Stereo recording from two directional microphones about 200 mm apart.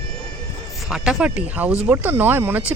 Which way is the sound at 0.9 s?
5° right (ahead or behind).